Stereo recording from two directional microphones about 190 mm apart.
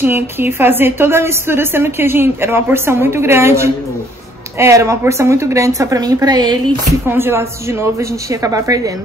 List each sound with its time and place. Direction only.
0.0 s a woman's voice: 10° right (ahead or behind)